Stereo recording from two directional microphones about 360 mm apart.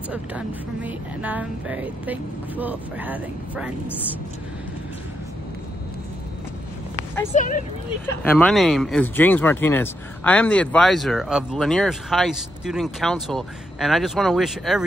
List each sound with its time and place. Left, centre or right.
0.1 s speech: centre
7.3 s speech: left
8.2 s speech: centre